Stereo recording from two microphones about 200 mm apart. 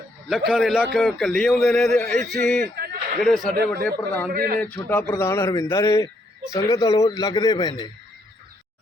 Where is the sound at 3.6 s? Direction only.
50° right (ahead or behind).